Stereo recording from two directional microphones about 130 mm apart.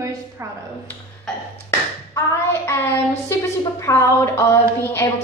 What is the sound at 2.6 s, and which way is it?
A woman's voice, 20° left (ahead or behind).